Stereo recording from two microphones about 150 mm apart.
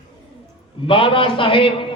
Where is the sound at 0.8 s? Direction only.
35° left (ahead or behind).